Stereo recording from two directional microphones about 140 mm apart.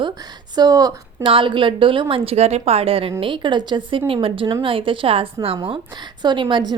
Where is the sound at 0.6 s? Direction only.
25° right (ahead or behind).